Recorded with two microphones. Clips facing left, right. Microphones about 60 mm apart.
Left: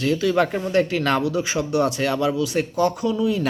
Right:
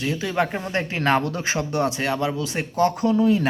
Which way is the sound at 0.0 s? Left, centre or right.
Right.